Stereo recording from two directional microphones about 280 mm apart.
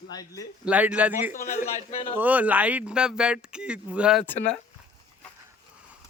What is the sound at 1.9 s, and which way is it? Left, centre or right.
Speech, centre.